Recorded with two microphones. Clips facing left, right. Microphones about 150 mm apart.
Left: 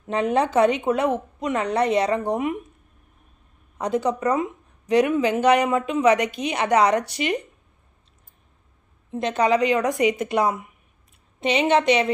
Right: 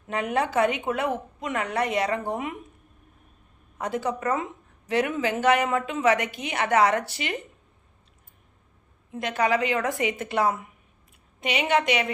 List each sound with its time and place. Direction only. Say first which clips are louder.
0.1 s a woman's voice: left 5 dB; 25° left (ahead or behind)
3.8 s a woman's voice: left 5 dB; 20° left (ahead or behind)
9.1 s a woman's voice: left 4 dB; 25° left (ahead or behind)